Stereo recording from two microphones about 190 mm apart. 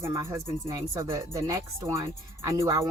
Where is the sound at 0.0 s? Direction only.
15° right (ahead or behind).